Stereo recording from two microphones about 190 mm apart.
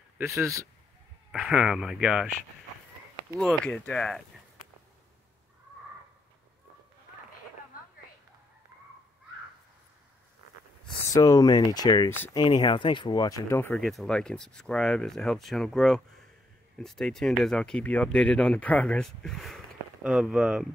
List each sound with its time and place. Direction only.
0.2 s a man's voice: 15° right (ahead or behind)
1.3 s speech: 5° right (ahead or behind)
3.3 s speech: 5° left (ahead or behind)
7.7 s a sound: 45° left (ahead or behind)
11.1 s speech: 20° left (ahead or behind)
13.7 s speech: centre (ahead or behind)